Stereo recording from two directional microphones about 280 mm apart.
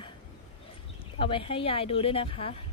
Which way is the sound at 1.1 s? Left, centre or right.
Centre.